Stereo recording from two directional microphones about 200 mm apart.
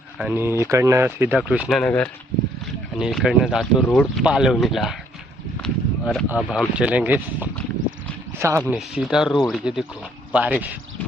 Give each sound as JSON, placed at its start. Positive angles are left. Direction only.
{"t": 0.2, "sound": "speech", "side_deg": -10}
{"t": 5.6, "sound": "a sound", "side_deg": 0}
{"t": 6.2, "sound": "speech", "side_deg": -5}